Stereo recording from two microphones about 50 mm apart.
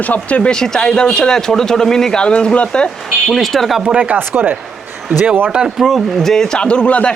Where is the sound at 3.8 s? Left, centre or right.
Right.